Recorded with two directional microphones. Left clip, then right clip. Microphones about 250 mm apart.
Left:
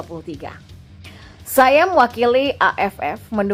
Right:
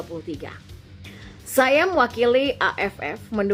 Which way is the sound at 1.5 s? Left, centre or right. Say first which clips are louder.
Left 5 dB; centre.